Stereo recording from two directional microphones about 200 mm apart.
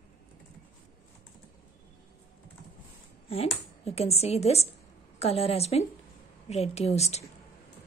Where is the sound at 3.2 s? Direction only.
30° left (ahead or behind).